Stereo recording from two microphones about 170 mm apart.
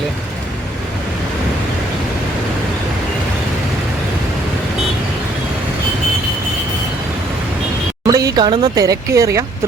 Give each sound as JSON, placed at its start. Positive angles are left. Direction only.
{"t": 8.0, "sound": "speech", "side_deg": -20}